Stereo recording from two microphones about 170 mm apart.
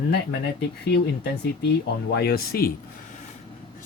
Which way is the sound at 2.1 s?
65° left (ahead or behind).